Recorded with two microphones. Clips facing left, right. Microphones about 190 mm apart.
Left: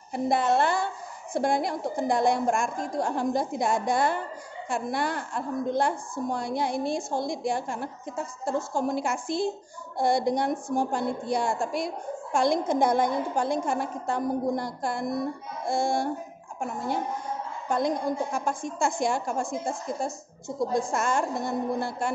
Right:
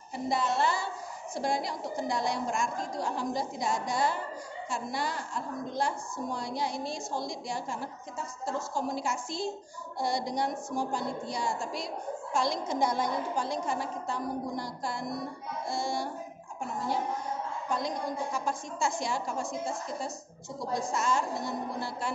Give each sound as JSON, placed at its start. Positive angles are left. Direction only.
{"t": 0.1, "sound": "a woman's voice", "side_deg": 55}